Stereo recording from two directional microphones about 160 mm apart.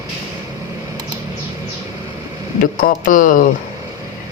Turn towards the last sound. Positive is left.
turn(degrees=55)  # may be behind; listen again after turning